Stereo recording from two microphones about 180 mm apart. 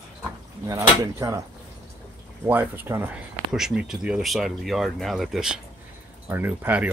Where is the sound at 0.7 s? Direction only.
15° right (ahead or behind).